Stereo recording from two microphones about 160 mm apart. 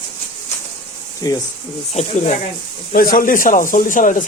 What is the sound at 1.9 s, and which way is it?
Speech, 50° left (ahead or behind).